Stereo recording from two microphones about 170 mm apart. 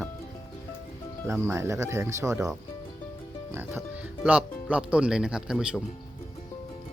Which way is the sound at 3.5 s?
10° right (ahead or behind).